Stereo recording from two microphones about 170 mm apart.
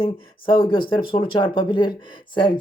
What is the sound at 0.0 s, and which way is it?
Speech, 30° left (ahead or behind).